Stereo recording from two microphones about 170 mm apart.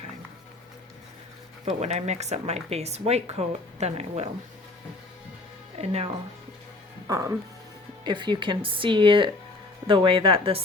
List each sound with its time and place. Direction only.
1.6 s speech: 40° right (ahead or behind)
5.8 s speech: 35° right (ahead or behind)
7.1 s speech: 15° right (ahead or behind); by 10.6 s 30° right (ahead or behind)